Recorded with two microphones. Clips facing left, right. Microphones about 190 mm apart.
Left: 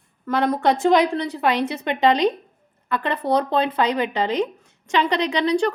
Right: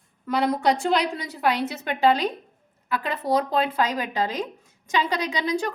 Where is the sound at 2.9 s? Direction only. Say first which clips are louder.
Left 3 dB; 5° right (ahead or behind).